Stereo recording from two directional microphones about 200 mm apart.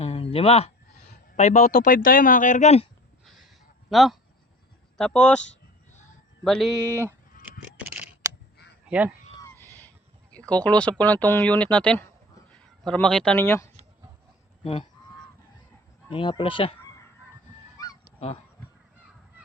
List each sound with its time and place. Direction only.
0.0 s a sound: 30° left (ahead or behind)
1.4 s speech: 35° left (ahead or behind)
3.8 s speech: centre (ahead or behind)
6.4 s speech: centre (ahead or behind)
6.9 s speech: 10° right (ahead or behind)
7.8 s scissors: 5° right (ahead or behind)
9.3 s a sound: 15° left (ahead or behind)
10.5 s speech: 5° left (ahead or behind)
14.6 s speech: 30° left (ahead or behind)
16.0 s speech: 25° left (ahead or behind)